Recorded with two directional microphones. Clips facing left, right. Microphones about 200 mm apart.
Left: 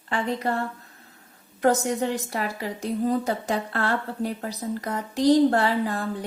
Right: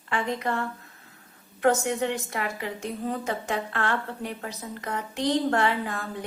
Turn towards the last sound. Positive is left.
turn(degrees=35)  # may be behind; listen again after turning